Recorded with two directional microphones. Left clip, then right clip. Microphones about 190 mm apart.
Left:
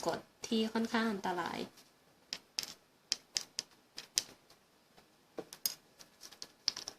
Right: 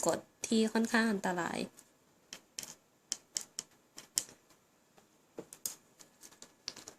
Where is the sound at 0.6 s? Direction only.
35° right (ahead or behind).